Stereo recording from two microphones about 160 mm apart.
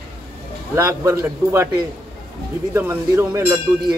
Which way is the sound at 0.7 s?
20° right (ahead or behind).